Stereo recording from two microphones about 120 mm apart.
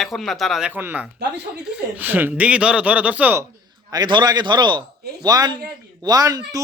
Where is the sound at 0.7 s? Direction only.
15° right (ahead or behind).